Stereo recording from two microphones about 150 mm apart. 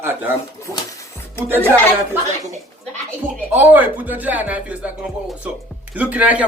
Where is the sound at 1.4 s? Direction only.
15° left (ahead or behind).